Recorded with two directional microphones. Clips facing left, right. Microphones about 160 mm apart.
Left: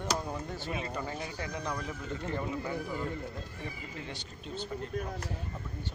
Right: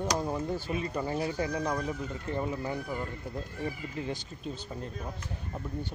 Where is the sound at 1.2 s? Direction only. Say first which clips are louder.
Right 7 dB; 35° right (ahead or behind).